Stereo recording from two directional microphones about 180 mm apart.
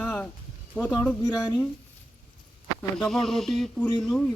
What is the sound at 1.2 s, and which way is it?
Speech, 25° left (ahead or behind).